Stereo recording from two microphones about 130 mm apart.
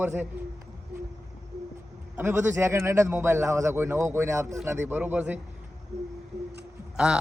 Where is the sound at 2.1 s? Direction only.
20° right (ahead or behind).